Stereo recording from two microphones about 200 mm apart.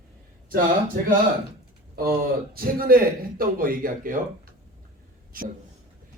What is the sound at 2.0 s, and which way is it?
A man's voice, 45° right (ahead or behind).